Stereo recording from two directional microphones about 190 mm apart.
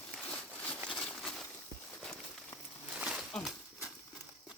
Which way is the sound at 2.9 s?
5° right (ahead or behind).